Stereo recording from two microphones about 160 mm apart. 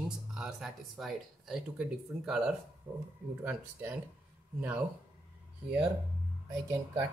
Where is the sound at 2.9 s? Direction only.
25° right (ahead or behind).